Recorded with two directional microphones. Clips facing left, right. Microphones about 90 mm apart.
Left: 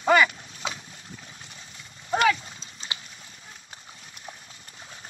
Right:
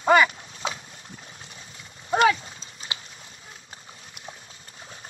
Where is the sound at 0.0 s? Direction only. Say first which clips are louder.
Right 2 dB; 30° right (ahead or behind).